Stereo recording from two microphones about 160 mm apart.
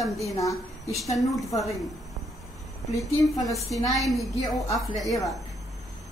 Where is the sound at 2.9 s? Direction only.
20° left (ahead or behind).